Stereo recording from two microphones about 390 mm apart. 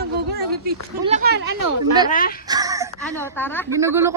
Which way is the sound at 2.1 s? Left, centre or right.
Left.